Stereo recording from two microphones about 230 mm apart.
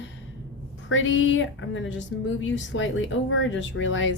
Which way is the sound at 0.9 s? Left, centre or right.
Left.